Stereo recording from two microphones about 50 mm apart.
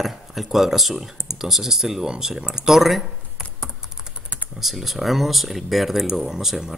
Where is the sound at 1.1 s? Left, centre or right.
Left.